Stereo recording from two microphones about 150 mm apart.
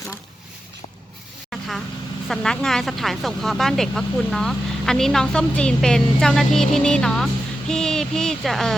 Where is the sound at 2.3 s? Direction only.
5° left (ahead or behind).